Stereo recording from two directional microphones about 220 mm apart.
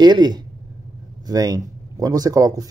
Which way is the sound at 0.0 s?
20° right (ahead or behind).